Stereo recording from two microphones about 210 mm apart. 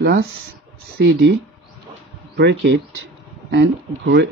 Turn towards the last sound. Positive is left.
turn(degrees=-55)  # may be behind; listen again after turning